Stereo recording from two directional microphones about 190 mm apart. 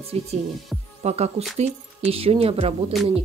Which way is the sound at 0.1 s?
35° right (ahead or behind).